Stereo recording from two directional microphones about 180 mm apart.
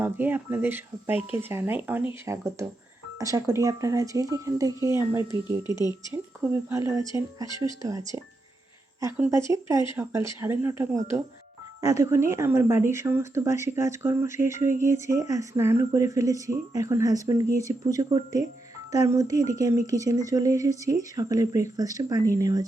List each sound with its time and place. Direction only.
0.0 s speech: 10° right (ahead or behind)